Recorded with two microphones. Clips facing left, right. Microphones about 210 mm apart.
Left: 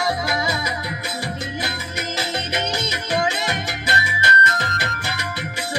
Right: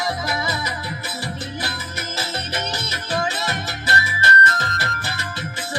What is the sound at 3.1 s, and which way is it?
Music, 15° left (ahead or behind).